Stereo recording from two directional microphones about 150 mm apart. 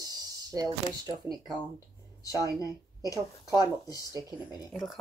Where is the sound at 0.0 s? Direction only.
25° right (ahead or behind).